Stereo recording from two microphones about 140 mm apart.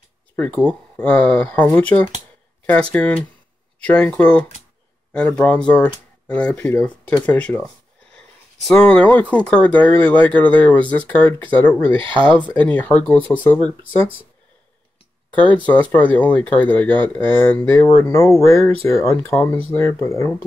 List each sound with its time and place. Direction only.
0.4 s speech: 10° left (ahead or behind)
7.2 s a sound: 10° left (ahead or behind)
8.6 s speech: 5° left (ahead or behind)
15.3 s speech: 10° left (ahead or behind)